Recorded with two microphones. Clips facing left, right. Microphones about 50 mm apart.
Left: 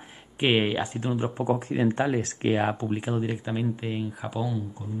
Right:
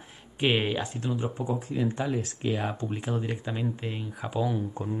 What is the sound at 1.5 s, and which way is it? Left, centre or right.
Speech, left.